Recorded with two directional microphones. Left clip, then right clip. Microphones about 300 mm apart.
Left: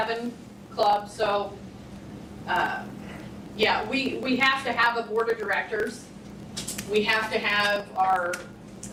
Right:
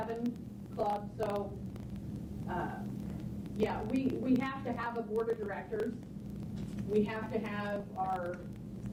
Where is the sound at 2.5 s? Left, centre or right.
Centre.